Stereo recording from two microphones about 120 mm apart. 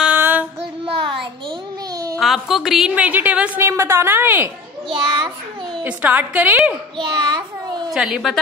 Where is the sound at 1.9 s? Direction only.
30° right (ahead or behind).